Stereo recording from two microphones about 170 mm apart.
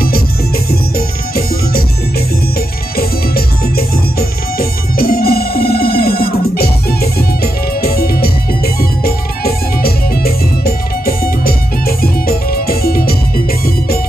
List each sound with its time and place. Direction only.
0.7 s music: 65° left (ahead or behind)
3.0 s music: 65° left (ahead or behind)